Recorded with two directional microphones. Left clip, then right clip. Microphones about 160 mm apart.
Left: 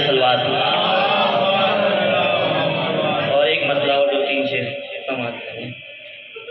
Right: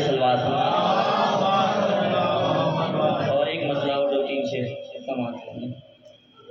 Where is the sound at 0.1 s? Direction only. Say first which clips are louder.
Left 5 dB; 20° left (ahead or behind).